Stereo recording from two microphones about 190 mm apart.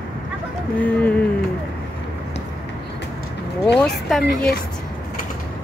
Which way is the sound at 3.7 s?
5° left (ahead or behind).